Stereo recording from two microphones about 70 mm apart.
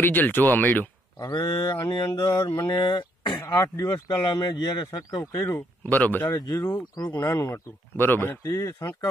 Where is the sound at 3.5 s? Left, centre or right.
Left.